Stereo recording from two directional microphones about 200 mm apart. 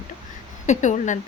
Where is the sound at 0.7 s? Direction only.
35° left (ahead or behind).